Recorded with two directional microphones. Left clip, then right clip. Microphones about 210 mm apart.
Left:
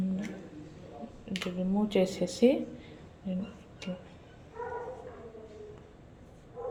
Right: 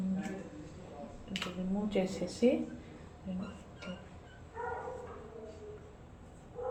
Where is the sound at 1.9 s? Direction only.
45° left (ahead or behind).